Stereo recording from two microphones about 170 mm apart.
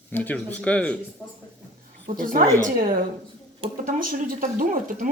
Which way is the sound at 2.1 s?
55° right (ahead or behind).